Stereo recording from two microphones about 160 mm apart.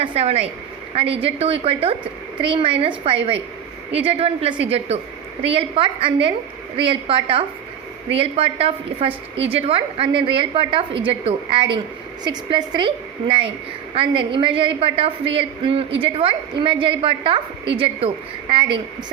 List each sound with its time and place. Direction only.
0.0 s a woman's voice: 35° right (ahead or behind)